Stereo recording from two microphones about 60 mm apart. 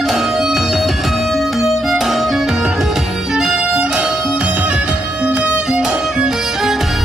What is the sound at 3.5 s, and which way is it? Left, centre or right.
Music, centre.